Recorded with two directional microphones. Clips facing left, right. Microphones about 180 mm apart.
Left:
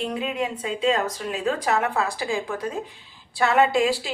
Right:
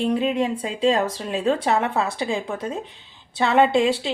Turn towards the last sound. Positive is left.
turn(degrees=-25)  # may be behind; listen again after turning